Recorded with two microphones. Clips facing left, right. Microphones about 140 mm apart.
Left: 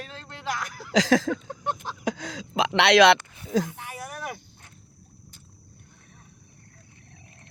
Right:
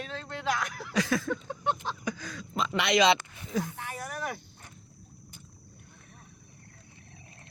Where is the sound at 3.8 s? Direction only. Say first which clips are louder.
Even; 10° left (ahead or behind).